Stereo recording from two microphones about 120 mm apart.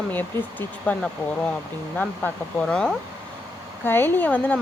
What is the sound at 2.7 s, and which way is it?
Speech, 5° left (ahead or behind).